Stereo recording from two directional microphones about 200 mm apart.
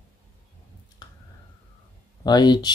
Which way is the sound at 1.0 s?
20° left (ahead or behind).